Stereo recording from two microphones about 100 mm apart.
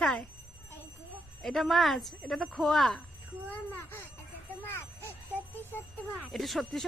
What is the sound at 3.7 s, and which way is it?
Bicycle bell, 25° left (ahead or behind).